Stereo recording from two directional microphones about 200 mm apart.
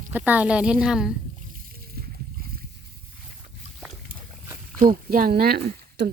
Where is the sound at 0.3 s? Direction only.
5° right (ahead or behind).